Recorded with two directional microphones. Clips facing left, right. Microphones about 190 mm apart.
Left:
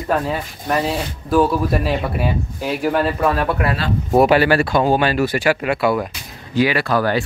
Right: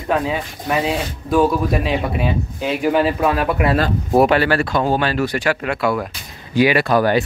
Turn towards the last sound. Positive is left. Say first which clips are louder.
# right 3 dB
turn(degrees=-15)  # may be behind; listen again after turning